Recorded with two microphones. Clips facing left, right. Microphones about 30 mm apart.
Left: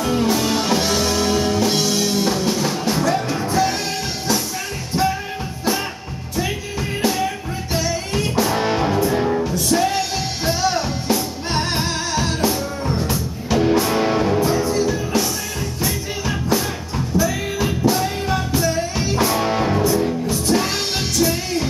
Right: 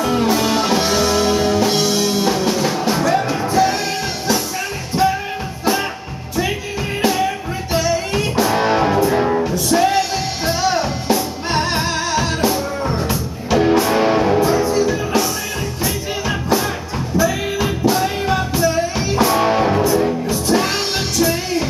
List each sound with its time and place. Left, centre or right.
0.0 s music: centre
5.0 s music: centre
7.7 s music: centre
16.3 s music: centre
18.5 s music: centre